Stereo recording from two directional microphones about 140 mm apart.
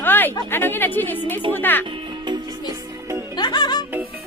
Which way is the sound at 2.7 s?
20° right (ahead or behind).